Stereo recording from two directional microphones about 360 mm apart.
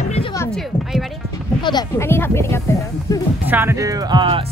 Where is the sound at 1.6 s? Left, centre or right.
Centre.